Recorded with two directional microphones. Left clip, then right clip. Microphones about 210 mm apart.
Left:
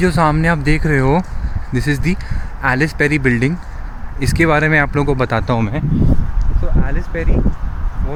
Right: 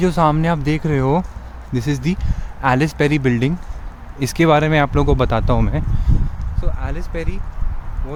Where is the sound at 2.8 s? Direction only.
10° right (ahead or behind).